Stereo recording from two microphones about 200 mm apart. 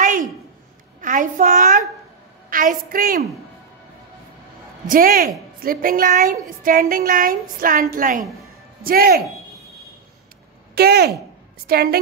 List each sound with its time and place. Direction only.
1.0 s a child's voice: 40° right (ahead or behind)
4.8 s a woman's voice: 45° right (ahead or behind)
10.7 s a woman's voice: 50° right (ahead or behind)